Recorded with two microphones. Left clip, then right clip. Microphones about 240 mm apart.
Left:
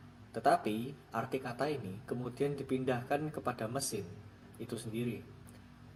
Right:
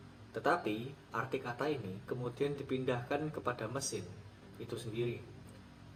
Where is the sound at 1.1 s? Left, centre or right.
Left.